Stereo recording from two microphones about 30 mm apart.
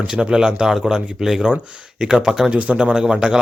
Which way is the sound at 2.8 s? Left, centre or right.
Right.